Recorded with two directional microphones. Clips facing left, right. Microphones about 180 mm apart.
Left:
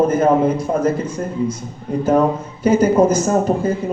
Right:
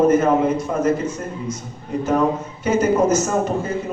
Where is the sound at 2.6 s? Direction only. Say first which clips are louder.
Left 5 dB; 30° left (ahead or behind).